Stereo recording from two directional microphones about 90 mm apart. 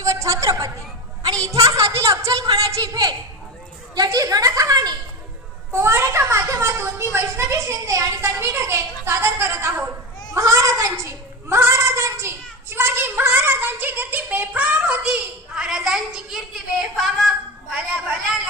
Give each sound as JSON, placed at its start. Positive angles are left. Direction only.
{"t": 0.0, "sound": "a sound", "side_deg": -35}
{"t": 3.9, "sound": "a woman's voice", "side_deg": -45}
{"t": 5.7, "sound": "a child's voice", "side_deg": -30}
{"t": 10.3, "sound": "child singing", "side_deg": -35}
{"t": 16.8, "sound": "speech", "side_deg": 0}